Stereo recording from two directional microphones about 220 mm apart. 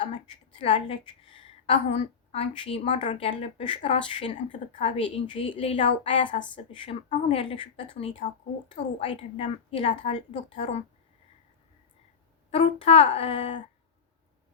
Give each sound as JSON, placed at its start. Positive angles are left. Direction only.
{"t": 0.6, "sound": "a woman's voice", "side_deg": 25}
{"t": 12.5, "sound": "a woman's voice", "side_deg": 25}